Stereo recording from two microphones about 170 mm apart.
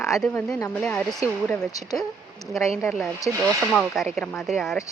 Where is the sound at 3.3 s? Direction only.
15° right (ahead or behind).